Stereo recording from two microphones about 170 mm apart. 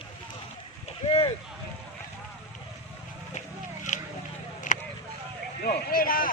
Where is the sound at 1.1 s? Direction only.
35° left (ahead or behind).